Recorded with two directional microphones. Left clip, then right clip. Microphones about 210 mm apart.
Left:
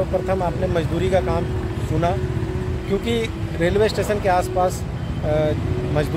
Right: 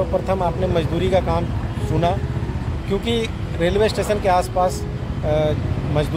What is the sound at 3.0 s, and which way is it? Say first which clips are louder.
Speech: right 1 dB; 5° right (ahead or behind).